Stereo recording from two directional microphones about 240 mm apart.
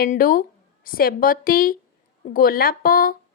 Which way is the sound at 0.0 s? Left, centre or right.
Left.